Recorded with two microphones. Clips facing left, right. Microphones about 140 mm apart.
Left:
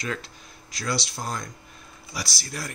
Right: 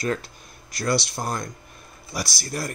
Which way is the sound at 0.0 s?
45° right (ahead or behind).